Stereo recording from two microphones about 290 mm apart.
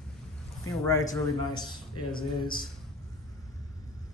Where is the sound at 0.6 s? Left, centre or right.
Centre.